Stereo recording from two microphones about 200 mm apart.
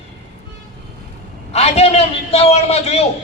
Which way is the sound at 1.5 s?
30° left (ahead or behind).